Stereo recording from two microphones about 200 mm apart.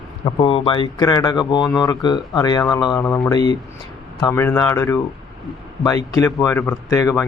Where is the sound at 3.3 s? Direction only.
20° left (ahead or behind).